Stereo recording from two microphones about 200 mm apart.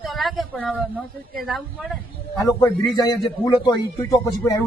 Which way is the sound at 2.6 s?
20° left (ahead or behind).